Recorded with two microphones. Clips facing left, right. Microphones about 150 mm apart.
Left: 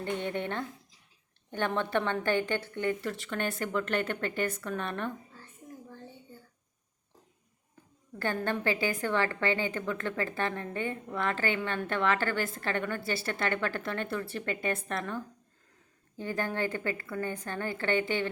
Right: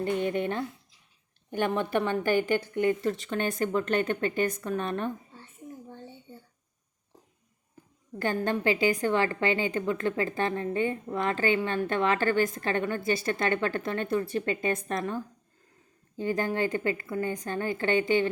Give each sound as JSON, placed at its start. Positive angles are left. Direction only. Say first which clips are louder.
{"t": 0.0, "sound": "a woman's voice", "louder": "right 5 dB", "side_deg": -15}
{"t": 5.9, "sound": "a sound", "louder": "right 3 dB", "side_deg": -25}
{"t": 8.2, "sound": "a woman's voice", "louder": "right 3 dB", "side_deg": -15}